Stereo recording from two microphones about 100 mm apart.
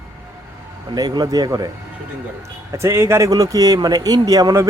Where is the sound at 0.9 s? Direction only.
40° right (ahead or behind).